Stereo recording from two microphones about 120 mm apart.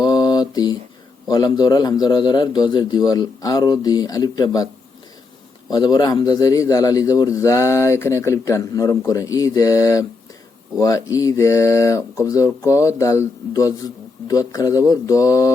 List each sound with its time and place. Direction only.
0.0 s mantra: 35° left (ahead or behind)
1.3 s a man's voice: 35° left (ahead or behind)
5.7 s a man's voice: 35° left (ahead or behind)